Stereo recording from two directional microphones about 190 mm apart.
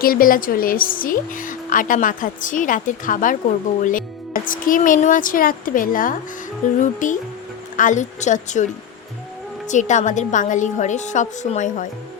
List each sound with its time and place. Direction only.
0.0 s a woman's voice: 50° left (ahead or behind)
4.4 s a woman's voice: 45° left (ahead or behind)
9.6 s a woman's voice: 40° left (ahead or behind)